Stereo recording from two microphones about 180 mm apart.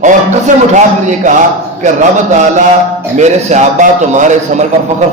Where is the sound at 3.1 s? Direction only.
40° right (ahead or behind).